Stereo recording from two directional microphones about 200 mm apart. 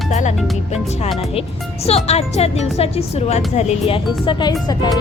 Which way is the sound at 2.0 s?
30° left (ahead or behind).